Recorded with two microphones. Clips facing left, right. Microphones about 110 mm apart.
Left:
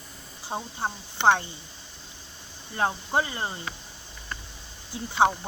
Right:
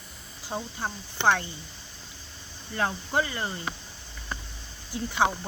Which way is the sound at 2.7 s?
25° left (ahead or behind).